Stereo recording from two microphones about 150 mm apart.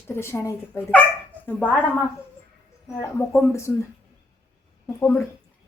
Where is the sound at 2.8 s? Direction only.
20° left (ahead or behind).